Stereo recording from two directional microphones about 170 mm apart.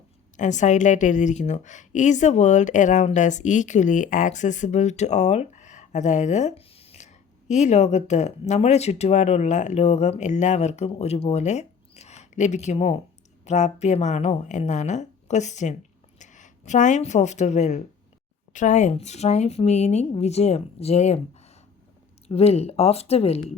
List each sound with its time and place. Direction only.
0.3 s a woman's voice: 45° left (ahead or behind)